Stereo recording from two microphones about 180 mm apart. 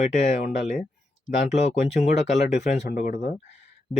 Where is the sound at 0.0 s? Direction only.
40° left (ahead or behind).